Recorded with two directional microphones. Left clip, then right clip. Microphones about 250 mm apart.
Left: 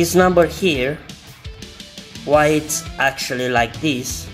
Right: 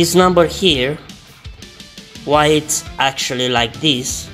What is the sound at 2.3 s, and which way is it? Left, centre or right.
Speech, centre.